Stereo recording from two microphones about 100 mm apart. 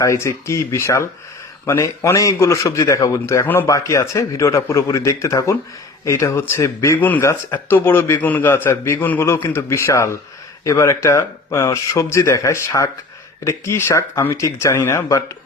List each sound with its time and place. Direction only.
0.0 s a man's voice: 30° left (ahead or behind)
3.4 s a man's voice: 20° left (ahead or behind)
3.7 s a man's voice: 30° left (ahead or behind)
7.0 s a man's voice: 15° left (ahead or behind)